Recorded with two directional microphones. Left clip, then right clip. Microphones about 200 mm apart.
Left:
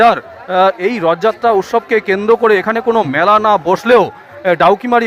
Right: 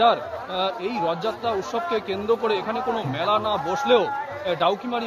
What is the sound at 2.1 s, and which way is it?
A man's voice, 30° left (ahead or behind).